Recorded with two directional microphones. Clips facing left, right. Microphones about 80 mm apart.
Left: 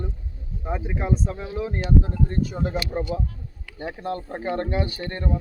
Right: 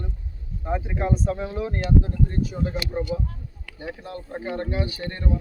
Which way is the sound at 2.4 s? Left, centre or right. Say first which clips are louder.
Left 1 dB; left.